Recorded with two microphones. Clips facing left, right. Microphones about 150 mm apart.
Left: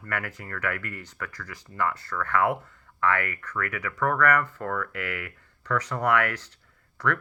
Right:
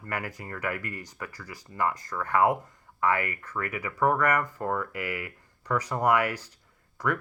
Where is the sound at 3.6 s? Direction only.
30° right (ahead or behind).